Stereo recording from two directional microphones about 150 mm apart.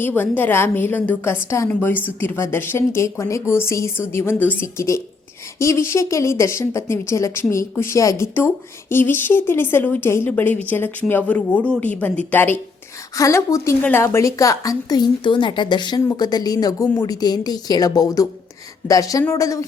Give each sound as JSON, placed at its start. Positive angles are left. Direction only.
{"t": 0.2, "sound": "a woman's voice", "side_deg": 15}